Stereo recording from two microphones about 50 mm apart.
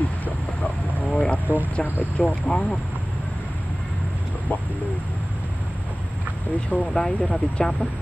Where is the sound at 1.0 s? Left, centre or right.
Centre.